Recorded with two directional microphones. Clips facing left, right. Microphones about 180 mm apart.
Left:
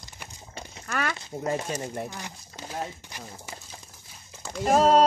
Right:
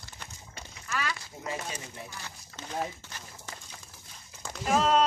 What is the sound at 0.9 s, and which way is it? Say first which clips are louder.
A woman's voice: left 4 dB; 60° left (ahead or behind).